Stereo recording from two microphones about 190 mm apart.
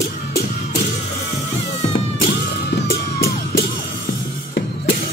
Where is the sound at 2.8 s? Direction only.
55° left (ahead or behind).